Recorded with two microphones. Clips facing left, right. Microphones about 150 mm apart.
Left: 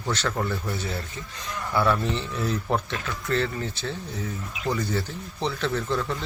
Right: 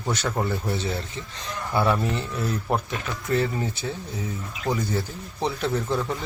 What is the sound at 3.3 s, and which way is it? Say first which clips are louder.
Speech: right 2 dB; 15° right (ahead or behind).